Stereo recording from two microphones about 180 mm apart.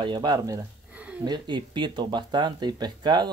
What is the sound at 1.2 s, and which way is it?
Speech, 25° right (ahead or behind).